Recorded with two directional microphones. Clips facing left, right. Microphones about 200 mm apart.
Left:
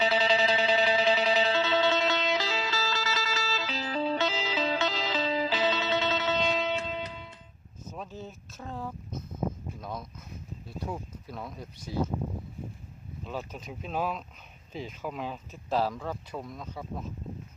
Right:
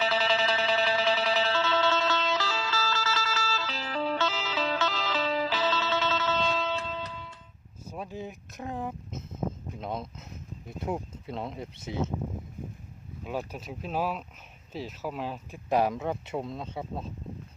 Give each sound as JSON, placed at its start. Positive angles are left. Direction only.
{"t": 0.0, "sound": "music", "side_deg": 20}
{"t": 7.9, "sound": "a sound", "side_deg": -10}
{"t": 10.7, "sound": "speech", "side_deg": -20}
{"t": 13.2, "sound": "speech", "side_deg": -10}
{"t": 15.7, "sound": "speech", "side_deg": -20}